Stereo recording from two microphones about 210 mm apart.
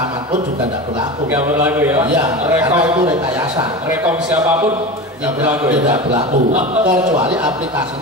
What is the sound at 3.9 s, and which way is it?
A man's voice, 10° right (ahead or behind).